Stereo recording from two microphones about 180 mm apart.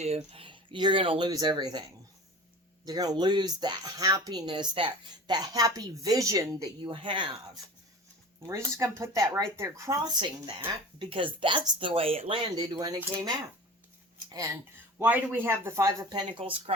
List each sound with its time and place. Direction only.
0.2 s a woman's voice: 30° right (ahead or behind)
8.4 s a woman's voice: 15° right (ahead or behind)
14.3 s speech: 20° right (ahead or behind)
16.4 s speech: 30° right (ahead or behind)